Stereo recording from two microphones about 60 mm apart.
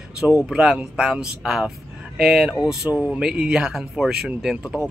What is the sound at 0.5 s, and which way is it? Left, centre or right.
Speech, centre.